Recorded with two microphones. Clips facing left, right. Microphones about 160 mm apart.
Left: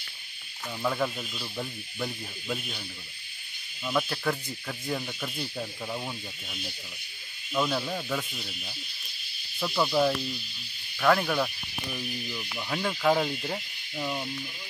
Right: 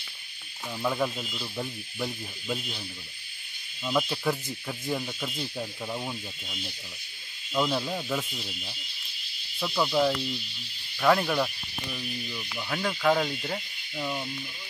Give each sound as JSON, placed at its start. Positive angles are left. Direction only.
{"t": 0.8, "sound": "speech", "side_deg": -5}
{"t": 3.8, "sound": "speech", "side_deg": -10}